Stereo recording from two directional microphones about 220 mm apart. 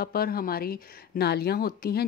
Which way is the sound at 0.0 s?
45° left (ahead or behind).